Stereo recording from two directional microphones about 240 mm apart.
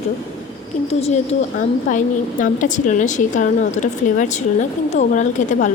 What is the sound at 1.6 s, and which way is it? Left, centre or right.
A woman's voice, left.